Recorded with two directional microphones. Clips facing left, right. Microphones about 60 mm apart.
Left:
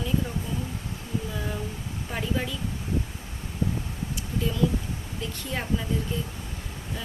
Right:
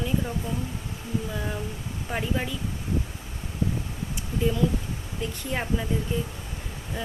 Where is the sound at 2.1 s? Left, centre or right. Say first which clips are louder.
Right 1 dB; centre.